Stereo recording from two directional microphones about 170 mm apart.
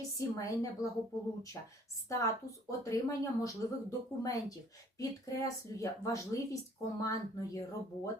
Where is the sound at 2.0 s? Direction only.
20° left (ahead or behind).